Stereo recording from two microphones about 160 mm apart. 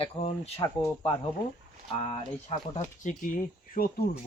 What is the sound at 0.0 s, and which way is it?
Speech, 40° left (ahead or behind).